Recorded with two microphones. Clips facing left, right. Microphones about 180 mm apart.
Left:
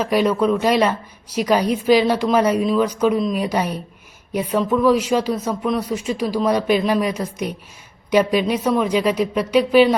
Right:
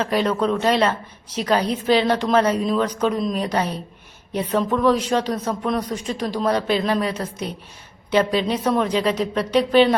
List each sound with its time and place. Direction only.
0.0 s a woman's voice: 10° left (ahead or behind)